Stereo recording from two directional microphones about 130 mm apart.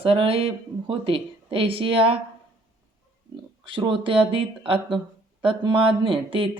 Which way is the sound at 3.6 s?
40° right (ahead or behind).